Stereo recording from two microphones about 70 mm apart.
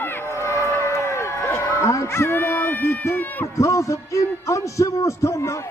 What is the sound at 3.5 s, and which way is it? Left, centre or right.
A man's voice, left.